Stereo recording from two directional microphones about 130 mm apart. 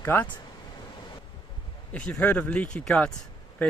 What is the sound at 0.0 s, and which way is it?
Speech, 20° left (ahead or behind).